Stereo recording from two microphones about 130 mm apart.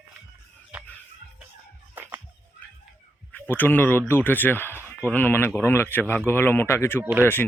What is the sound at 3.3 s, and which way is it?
Speech, 15° left (ahead or behind).